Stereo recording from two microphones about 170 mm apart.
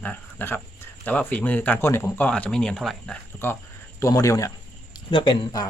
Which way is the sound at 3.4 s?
15° left (ahead or behind).